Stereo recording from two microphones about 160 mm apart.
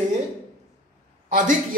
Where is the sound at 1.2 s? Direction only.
50° right (ahead or behind).